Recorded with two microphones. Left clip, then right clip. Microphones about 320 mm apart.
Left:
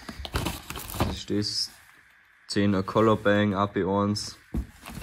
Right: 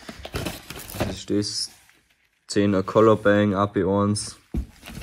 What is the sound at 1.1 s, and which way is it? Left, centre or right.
Speech, centre.